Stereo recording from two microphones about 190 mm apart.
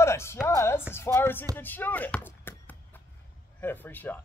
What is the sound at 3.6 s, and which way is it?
Speech, 10° left (ahead or behind).